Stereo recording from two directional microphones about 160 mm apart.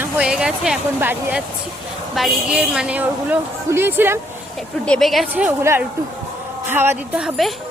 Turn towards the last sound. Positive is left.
turn(degrees=-5)  # may be behind; listen again after turning